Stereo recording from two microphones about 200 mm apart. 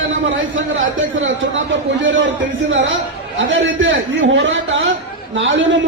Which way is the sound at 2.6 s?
70° right (ahead or behind).